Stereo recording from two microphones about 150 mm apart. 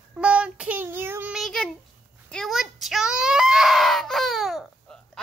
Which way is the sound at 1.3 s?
Centre (ahead or behind).